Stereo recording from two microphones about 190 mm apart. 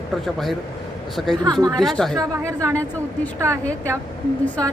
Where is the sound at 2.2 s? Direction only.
15° right (ahead or behind).